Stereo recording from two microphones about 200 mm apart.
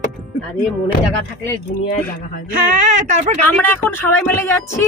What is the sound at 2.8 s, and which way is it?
Speech, 40° right (ahead or behind).